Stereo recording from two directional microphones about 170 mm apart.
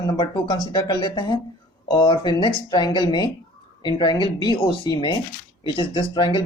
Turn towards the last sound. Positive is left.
turn(degrees=30)  # may be behind; listen again after turning